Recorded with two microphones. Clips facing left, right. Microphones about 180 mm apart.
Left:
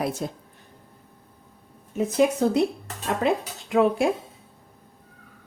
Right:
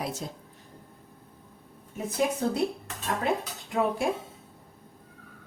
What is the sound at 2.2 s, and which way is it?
Speech, 80° left.